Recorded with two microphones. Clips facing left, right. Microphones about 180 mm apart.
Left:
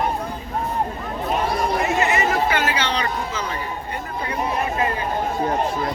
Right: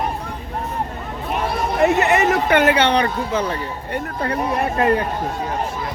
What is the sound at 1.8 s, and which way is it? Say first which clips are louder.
Speech: right 4 dB; 65° right (ahead or behind).